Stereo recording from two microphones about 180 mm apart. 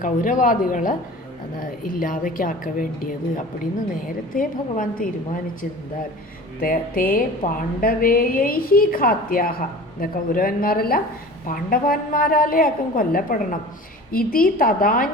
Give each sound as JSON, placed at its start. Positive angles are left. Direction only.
{"t": 0.0, "sound": "a woman's voice", "side_deg": 45}
{"t": 6.6, "sound": "a woman's voice", "side_deg": 55}